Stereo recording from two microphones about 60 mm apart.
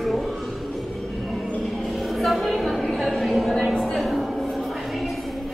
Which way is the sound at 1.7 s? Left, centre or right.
Centre.